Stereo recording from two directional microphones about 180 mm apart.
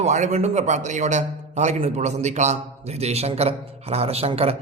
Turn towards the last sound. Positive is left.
turn(degrees=-35)  # may be behind; listen again after turning